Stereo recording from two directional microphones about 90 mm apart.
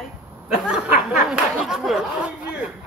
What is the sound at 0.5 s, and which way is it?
A man's voice, 5° right (ahead or behind).